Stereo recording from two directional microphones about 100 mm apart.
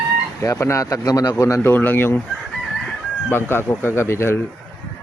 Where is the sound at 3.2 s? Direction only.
20° left (ahead or behind).